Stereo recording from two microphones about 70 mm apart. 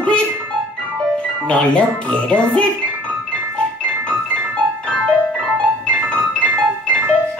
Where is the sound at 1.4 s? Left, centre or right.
Centre.